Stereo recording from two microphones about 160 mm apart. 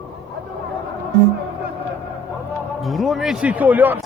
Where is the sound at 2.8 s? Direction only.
Centre (ahead or behind).